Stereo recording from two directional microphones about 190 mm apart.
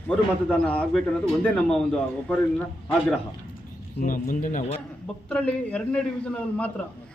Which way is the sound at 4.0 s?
45° left (ahead or behind).